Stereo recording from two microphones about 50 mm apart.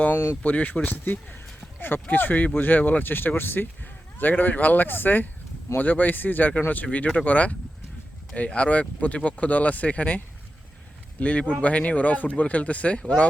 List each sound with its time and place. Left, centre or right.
0.4 s speech: left
11.2 s speech: left